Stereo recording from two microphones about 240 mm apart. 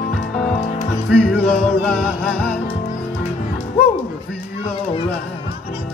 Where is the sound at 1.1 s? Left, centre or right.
Centre.